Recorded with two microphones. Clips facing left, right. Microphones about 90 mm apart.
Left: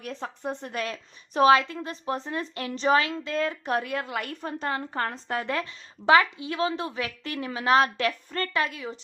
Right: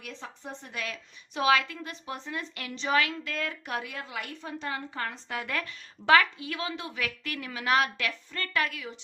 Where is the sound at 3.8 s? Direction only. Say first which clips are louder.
Left 7 dB; 55° left (ahead or behind); by 5.5 s 40° left (ahead or behind).